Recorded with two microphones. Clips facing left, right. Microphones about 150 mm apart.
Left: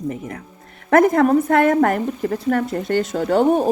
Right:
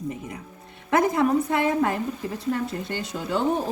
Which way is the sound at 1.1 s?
90° left.